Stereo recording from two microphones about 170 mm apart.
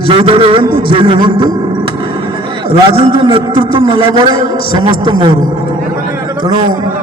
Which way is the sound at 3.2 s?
30° right (ahead or behind).